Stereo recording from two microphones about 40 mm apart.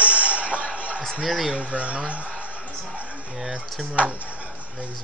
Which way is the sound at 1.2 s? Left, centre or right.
Centre.